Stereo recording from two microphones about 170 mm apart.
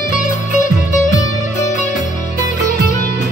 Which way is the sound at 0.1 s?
45° left (ahead or behind).